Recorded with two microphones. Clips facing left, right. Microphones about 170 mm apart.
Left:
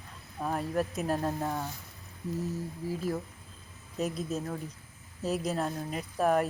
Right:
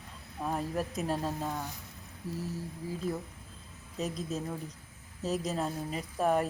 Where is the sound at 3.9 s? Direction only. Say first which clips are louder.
Left 2 dB; centre (ahead or behind).